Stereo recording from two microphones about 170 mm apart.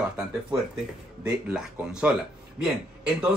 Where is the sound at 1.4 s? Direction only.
5° right (ahead or behind).